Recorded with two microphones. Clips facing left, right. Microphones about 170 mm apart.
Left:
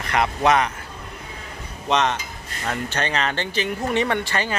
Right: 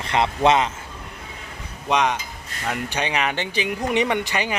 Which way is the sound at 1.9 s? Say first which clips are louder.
Even; 10° right (ahead or behind).